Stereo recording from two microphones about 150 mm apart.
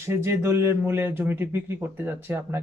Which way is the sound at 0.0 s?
20° right (ahead or behind).